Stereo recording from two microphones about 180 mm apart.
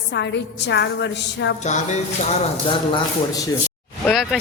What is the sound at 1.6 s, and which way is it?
Speech, 40° left (ahead or behind).